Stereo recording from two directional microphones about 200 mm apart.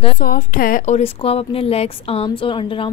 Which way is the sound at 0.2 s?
45° left (ahead or behind).